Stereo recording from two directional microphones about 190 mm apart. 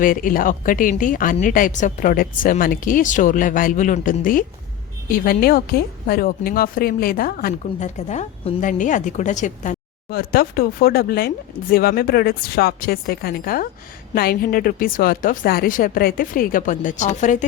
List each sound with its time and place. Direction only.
0.0 s speech: 45° left (ahead or behind)